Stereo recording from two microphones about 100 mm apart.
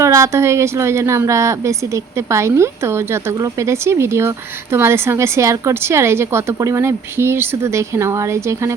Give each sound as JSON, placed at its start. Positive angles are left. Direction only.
{"t": 0.0, "sound": "speech", "side_deg": -30}